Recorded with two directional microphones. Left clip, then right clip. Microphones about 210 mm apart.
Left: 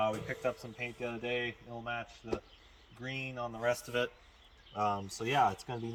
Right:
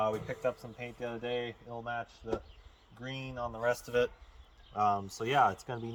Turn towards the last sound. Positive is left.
turn(degrees=-5)  # may be behind; listen again after turning